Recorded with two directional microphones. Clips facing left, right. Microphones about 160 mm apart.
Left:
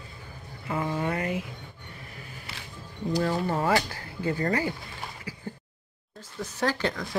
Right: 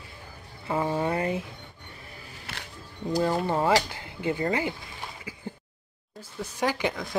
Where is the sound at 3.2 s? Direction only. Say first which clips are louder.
Right 2 dB; 20° right (ahead or behind).